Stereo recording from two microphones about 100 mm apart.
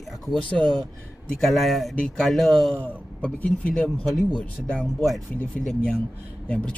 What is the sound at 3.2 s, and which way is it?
Speech, 15° left (ahead or behind).